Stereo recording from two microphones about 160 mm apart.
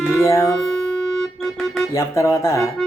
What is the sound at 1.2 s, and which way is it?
Music, 5° left (ahead or behind).